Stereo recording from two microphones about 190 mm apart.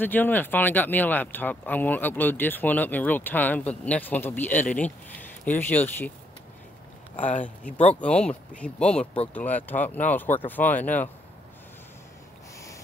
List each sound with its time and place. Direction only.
0.0 s speech: 10° left (ahead or behind)
7.2 s speech: 40° left (ahead or behind)
7.4 s speech: 10° left (ahead or behind)